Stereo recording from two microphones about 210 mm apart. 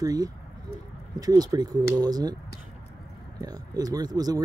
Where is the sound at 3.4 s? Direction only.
20° right (ahead or behind).